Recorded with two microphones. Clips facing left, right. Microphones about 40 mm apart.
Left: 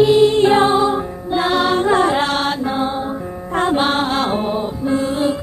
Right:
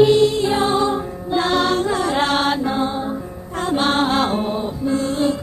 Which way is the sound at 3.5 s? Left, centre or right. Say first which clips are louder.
Left 5 dB; left.